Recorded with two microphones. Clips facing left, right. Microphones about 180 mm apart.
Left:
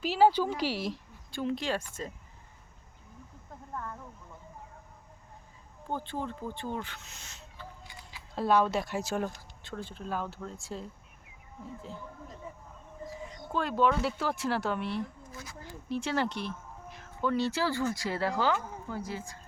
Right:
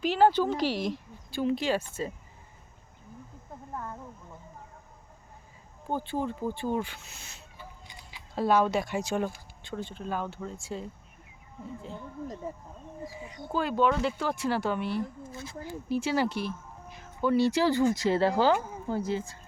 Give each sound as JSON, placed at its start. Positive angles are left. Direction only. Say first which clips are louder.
{"t": 0.0, "sound": "speech", "louder": "right 1 dB", "side_deg": 5}
{"t": 3.8, "sound": "speech", "louder": "right 1 dB", "side_deg": -20}
{"t": 5.9, "sound": "speech", "louder": "right 4 dB", "side_deg": -10}
{"t": 13.1, "sound": "speech", "louder": "right 2 dB", "side_deg": -5}